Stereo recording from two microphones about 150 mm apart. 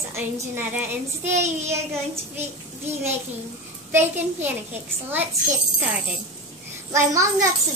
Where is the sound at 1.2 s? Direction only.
50° right (ahead or behind).